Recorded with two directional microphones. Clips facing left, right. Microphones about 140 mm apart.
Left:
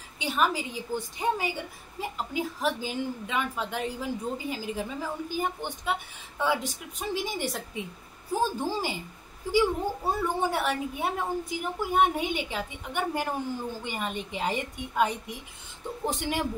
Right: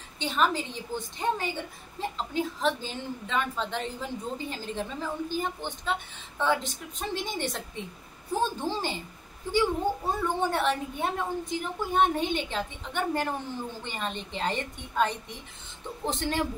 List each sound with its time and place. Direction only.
0.2 s a woman's voice: 10° left (ahead or behind)